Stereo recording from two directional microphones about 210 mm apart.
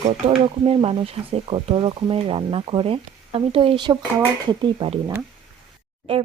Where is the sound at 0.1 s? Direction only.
30° right (ahead or behind).